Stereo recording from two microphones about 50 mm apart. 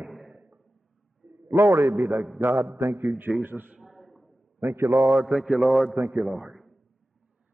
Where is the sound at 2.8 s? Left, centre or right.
Right.